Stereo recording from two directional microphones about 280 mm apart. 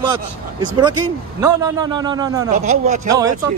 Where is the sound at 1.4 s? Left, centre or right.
Centre.